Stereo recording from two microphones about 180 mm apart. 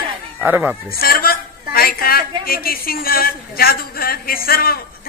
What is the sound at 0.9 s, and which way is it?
A man's voice, 55° left (ahead or behind).